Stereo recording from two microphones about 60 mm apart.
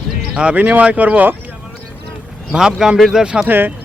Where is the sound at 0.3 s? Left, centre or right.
Right.